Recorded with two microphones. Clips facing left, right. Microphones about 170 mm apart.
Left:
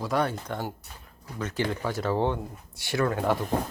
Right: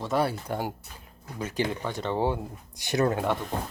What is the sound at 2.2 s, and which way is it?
Speech, 15° right (ahead or behind).